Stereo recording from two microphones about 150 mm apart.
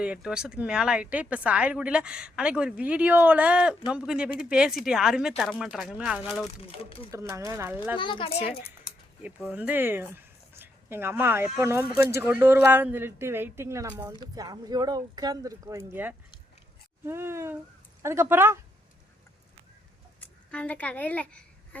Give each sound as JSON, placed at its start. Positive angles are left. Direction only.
{"t": 0.0, "sound": "speech", "side_deg": -5}
{"t": 6.7, "sound": "speech", "side_deg": 40}
{"t": 7.1, "sound": "speech", "side_deg": -20}
{"t": 7.9, "sound": "speech", "side_deg": 35}
{"t": 9.2, "sound": "speech", "side_deg": -10}
{"t": 20.5, "sound": "a woman's voice", "side_deg": 10}